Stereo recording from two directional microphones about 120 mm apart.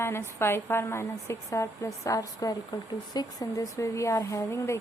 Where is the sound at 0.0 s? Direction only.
20° left (ahead or behind).